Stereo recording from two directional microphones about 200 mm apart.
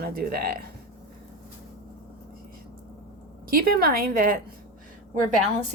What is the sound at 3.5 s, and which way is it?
Speech, 50° right (ahead or behind).